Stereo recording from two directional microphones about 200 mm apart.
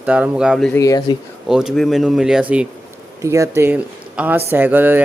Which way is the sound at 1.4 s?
Centre (ahead or behind).